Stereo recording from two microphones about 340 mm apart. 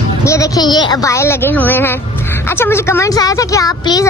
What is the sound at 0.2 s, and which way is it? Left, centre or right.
A woman's voice, centre.